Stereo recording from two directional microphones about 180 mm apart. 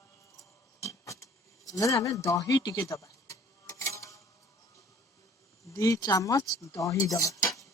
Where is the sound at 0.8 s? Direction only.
15° left (ahead or behind).